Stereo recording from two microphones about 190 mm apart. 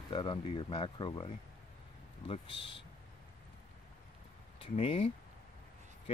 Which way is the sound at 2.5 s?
25° left (ahead or behind).